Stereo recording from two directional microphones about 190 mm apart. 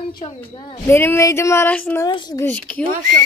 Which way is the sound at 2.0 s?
20° left (ahead or behind).